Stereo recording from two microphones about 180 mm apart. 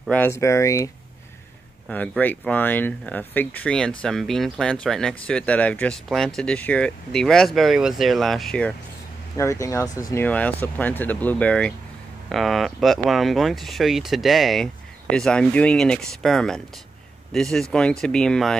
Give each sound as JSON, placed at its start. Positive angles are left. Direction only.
{"t": 0.0, "sound": "speech", "side_deg": 10}
{"t": 9.4, "sound": "speech", "side_deg": 15}